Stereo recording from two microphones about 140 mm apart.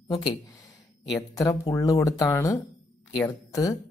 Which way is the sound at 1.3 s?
25° left (ahead or behind).